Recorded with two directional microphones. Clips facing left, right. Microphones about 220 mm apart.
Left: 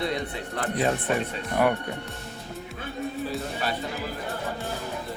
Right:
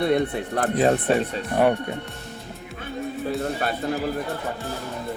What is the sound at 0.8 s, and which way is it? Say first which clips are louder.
Speech: right 5 dB; 35° right (ahead or behind).